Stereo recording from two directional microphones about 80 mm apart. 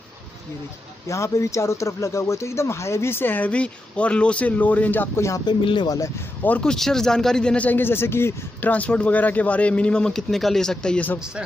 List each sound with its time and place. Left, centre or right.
1.0 s speech: left
5.4 s speech: left
6.6 s speech: centre